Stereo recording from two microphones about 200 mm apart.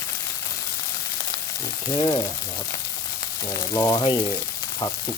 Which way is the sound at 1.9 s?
25° left (ahead or behind).